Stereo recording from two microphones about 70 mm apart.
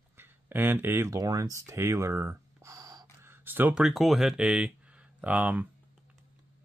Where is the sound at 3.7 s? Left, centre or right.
Centre; by 5.7 s right.